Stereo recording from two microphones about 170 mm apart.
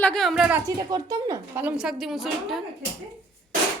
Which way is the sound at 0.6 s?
20° right (ahead or behind).